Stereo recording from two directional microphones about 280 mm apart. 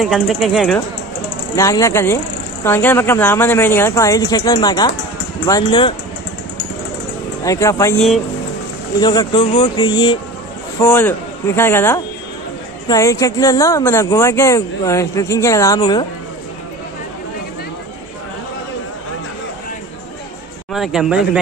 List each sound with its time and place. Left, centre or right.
0.0 s speech: centre
1.6 s speech: centre
7.4 s speech: centre
20.7 s speech: centre